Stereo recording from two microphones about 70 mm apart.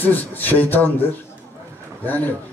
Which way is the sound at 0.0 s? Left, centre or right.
Left.